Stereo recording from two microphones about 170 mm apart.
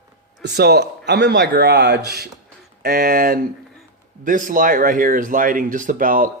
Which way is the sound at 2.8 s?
60° right (ahead or behind).